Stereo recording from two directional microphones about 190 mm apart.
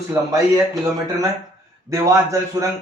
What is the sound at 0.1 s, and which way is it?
Speech, 15° right (ahead or behind).